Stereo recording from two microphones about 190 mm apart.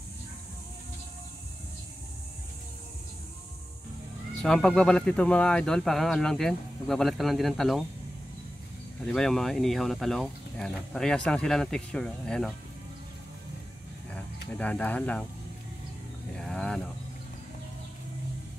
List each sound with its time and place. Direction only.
4.4 s speech: 5° left (ahead or behind)
9.0 s speech: centre (ahead or behind)
14.5 s speech: 5° left (ahead or behind)
16.3 s vehicle: 5° left (ahead or behind)